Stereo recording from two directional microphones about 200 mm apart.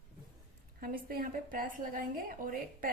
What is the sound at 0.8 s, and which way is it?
A woman's voice, 45° right (ahead or behind).